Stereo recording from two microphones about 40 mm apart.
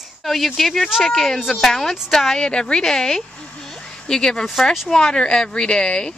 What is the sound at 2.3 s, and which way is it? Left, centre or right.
Speech, left.